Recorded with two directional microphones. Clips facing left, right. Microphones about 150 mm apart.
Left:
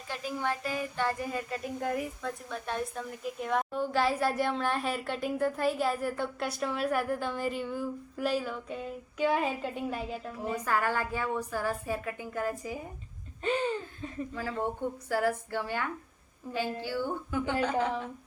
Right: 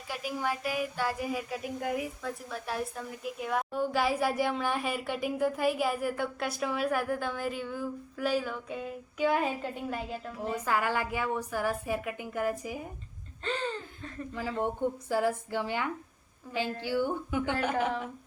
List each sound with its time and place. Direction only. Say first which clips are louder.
0.1 s a woman's voice: even; 10° right (ahead or behind)
10.7 s a woman's voice: even; 15° right (ahead or behind)
13.4 s a sound: left 4 dB; 10° left (ahead or behind)
14.3 s a woman's voice: right 3 dB; 15° right (ahead or behind)